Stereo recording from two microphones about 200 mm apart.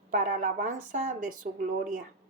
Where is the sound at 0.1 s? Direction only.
40° right (ahead or behind).